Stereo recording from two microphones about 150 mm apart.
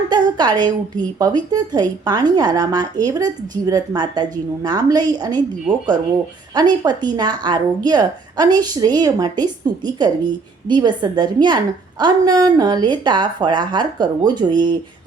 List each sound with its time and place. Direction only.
0.1 s speech: 30° right (ahead or behind)
6.5 s speech: 30° right (ahead or behind)